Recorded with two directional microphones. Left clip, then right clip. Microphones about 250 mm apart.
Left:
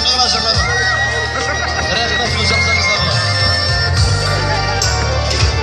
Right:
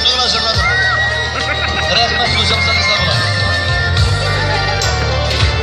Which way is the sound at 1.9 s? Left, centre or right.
Right.